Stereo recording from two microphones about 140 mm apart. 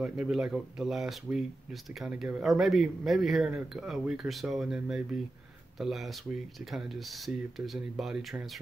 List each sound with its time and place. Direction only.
0.0 s speech: 5° right (ahead or behind)